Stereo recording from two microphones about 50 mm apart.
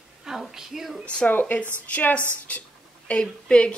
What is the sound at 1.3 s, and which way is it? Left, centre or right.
Speech, left.